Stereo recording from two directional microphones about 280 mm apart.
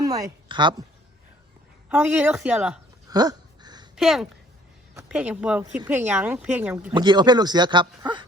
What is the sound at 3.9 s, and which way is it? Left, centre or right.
Speech, centre.